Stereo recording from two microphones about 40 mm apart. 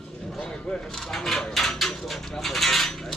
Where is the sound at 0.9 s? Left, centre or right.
Centre.